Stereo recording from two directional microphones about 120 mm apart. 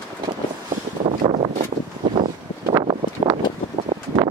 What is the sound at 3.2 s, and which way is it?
Vehicle, 45° right (ahead or behind).